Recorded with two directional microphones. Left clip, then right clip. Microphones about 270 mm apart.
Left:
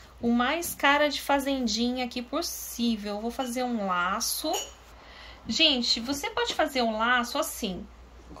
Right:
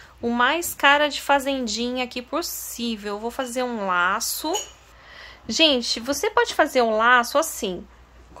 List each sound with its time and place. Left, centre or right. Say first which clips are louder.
0.2 s a woman's voice: right 6 dB; centre